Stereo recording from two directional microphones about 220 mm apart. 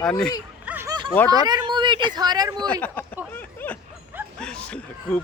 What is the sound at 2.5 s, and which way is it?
Speech, 5° left (ahead or behind).